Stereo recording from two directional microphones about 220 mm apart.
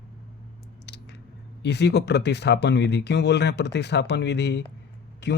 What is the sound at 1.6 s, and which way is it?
Speech, 50° left (ahead or behind).